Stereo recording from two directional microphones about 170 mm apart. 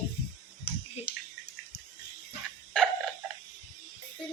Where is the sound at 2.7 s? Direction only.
5° left (ahead or behind).